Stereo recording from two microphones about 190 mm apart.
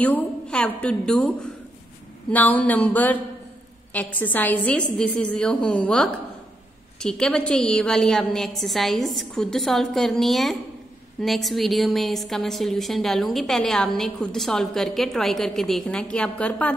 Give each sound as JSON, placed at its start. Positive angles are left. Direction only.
{"t": 0.0, "sound": "a woman's voice", "side_deg": 5}